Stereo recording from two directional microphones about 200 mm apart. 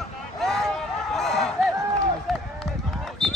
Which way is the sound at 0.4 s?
Centre (ahead or behind).